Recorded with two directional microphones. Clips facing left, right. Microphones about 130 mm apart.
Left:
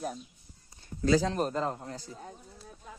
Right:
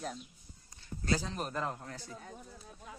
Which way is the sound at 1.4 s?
30° left (ahead or behind).